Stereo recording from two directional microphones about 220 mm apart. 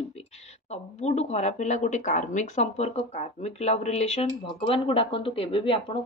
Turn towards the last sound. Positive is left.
turn(degrees=25)  # may be behind; listen again after turning